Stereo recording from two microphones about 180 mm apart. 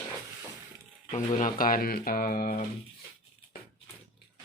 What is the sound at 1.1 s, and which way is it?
Speech, 45° left (ahead or behind).